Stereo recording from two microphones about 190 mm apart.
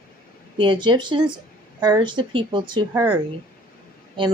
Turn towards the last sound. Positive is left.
turn(degrees=-25)  # may be behind; listen again after turning